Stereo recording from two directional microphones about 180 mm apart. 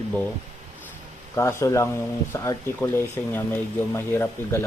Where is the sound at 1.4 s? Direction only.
15° left (ahead or behind).